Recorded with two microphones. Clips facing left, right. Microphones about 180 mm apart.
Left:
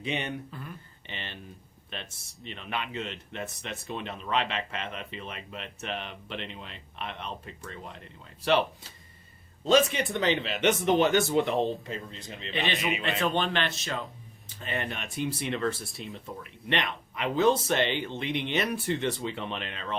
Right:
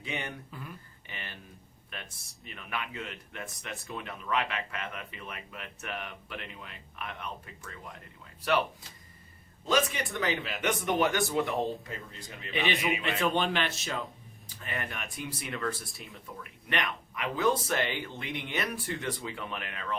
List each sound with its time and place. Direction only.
0.0 s speech: 20° left (ahead or behind)
1.0 s a sound: 25° left (ahead or behind)
2.4 s speech: 25° left (ahead or behind)
9.6 s speech: 25° left (ahead or behind)
13.2 s speech: 5° right (ahead or behind)
14.6 s speech: 25° left (ahead or behind)